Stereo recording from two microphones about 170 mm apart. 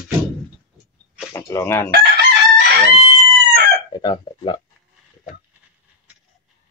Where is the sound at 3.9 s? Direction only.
25° left (ahead or behind).